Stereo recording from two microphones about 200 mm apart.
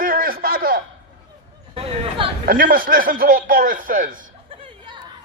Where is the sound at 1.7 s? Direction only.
25° right (ahead or behind).